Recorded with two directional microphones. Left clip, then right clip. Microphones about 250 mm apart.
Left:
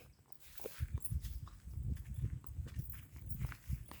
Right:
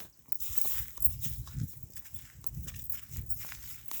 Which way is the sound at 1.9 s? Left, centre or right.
Right.